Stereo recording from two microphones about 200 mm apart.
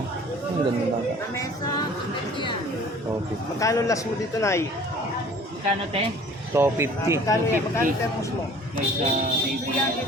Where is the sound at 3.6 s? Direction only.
15° left (ahead or behind).